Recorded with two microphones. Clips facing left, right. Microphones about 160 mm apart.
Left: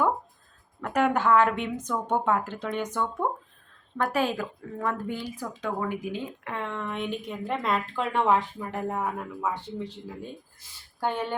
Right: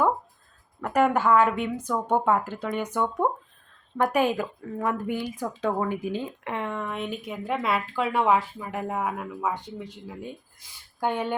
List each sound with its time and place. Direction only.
0.8 s a woman's voice: 5° right (ahead or behind)
5.5 s speech: 30° right (ahead or behind)
6.5 s speech: 15° right (ahead or behind)
11.0 s speech: 15° right (ahead or behind)